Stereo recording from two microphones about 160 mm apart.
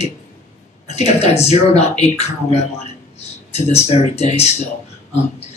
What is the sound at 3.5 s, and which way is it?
A man's voice, 40° left (ahead or behind).